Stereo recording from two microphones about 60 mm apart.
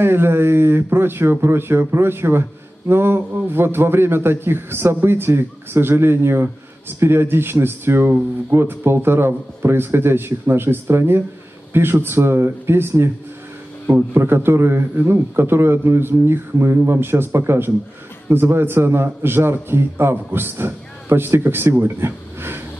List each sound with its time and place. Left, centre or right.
0.0 s speech: right
14.1 s a man's voice: right